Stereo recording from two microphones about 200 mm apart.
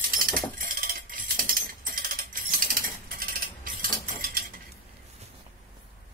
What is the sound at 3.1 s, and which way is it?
Cutlery, 45° right (ahead or behind).